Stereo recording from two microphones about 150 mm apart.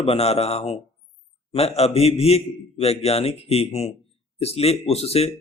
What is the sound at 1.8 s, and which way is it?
A man's voice, 45° left (ahead or behind).